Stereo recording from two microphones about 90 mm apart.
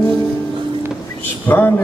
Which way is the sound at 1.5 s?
25° left (ahead or behind).